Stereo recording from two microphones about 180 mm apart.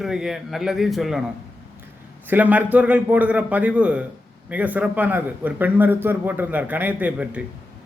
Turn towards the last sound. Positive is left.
turn(degrees=-5)  # may be behind; listen again after turning